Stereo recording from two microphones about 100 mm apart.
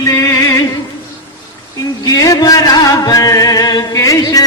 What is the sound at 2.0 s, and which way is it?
Music, 40° left (ahead or behind).